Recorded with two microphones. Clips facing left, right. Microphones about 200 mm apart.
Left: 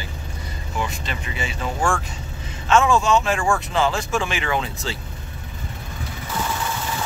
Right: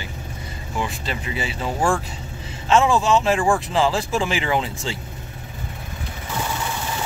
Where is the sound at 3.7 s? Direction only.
30° right (ahead or behind).